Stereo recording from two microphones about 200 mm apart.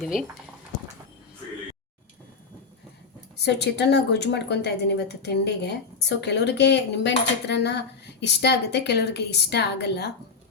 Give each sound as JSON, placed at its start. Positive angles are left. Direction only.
{"t": 0.0, "sound": "speech", "side_deg": 0}
{"t": 3.3, "sound": "a woman's voice", "side_deg": 55}